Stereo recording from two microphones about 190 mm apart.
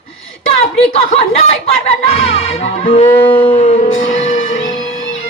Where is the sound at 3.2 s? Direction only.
25° left (ahead or behind).